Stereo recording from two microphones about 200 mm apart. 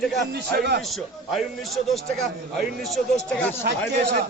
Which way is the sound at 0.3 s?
55° right (ahead or behind).